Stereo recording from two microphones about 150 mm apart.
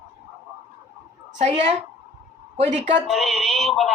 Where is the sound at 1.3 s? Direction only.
50° right (ahead or behind).